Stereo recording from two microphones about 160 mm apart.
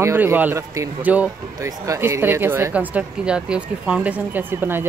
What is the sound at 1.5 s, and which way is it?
Speech, 20° right (ahead or behind).